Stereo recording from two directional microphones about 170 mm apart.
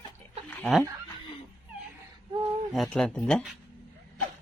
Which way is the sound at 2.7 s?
Centre (ahead or behind).